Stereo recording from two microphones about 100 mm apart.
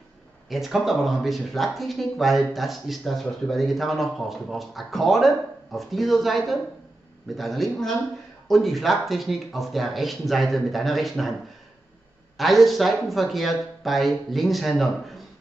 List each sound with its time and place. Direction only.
0.5 s speech: centre (ahead or behind)
12.4 s speech: centre (ahead or behind)